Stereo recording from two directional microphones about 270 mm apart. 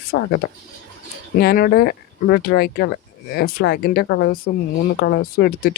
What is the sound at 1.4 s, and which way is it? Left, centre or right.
Speech, left.